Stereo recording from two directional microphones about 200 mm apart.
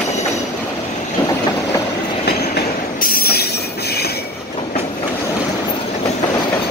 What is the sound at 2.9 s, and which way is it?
Train, 50° left (ahead or behind).